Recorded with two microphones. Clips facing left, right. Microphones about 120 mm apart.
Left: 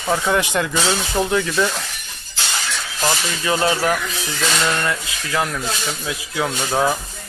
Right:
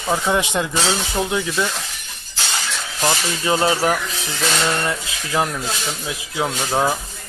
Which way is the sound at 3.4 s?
25° right (ahead or behind).